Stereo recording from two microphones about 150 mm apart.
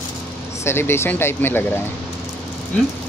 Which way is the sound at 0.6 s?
15° left (ahead or behind).